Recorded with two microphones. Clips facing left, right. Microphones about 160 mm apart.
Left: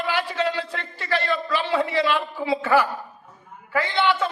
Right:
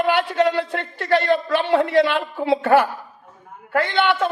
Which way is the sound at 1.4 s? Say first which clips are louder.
Right 5 dB; 55° right (ahead or behind).